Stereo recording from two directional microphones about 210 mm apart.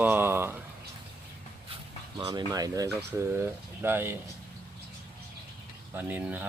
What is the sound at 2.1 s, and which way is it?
Speech, 20° right (ahead or behind).